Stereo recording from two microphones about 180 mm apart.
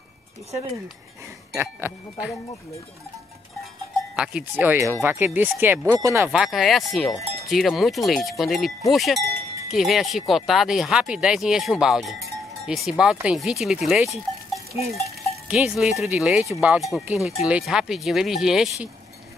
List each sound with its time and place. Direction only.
1.5 s speech: 15° right (ahead or behind)
4.2 s speech: 5° right (ahead or behind)
6.3 s speech: centre (ahead or behind)
15.4 s speech: 5° right (ahead or behind)